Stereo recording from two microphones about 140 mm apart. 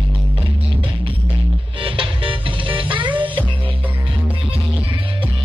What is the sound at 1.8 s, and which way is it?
Music, 40° right (ahead or behind).